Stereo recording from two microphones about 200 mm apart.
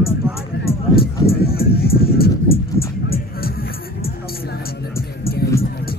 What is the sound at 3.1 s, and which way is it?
Music, 50° left (ahead or behind).